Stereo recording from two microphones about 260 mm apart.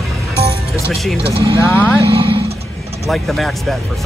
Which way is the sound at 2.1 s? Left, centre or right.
Right.